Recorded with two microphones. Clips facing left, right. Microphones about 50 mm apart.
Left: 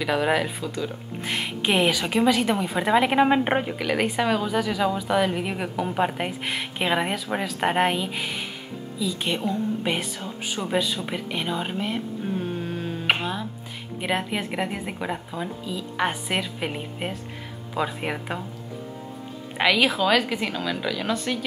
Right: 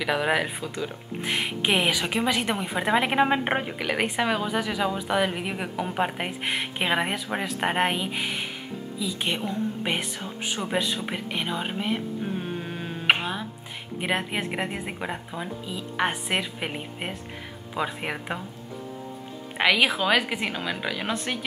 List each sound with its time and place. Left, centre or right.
0.0 s speech: centre
12.4 s mantra: centre
13.9 s speech: centre
19.5 s speech: centre